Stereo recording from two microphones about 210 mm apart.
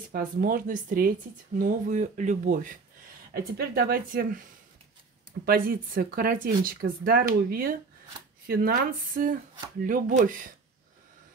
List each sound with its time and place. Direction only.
0.1 s speech: 40° right (ahead or behind)